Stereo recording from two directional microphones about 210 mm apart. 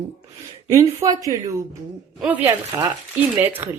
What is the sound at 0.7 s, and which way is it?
Speech, 15° right (ahead or behind).